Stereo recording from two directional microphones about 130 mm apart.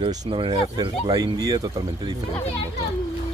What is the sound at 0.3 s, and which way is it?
Speech, 40° right (ahead or behind).